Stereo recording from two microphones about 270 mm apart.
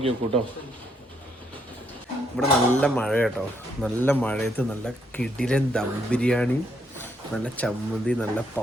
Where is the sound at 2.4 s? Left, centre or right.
Centre.